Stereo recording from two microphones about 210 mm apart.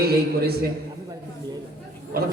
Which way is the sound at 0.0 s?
50° right (ahead or behind).